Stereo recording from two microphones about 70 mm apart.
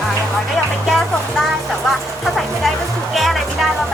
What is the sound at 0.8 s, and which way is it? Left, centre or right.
Music, centre.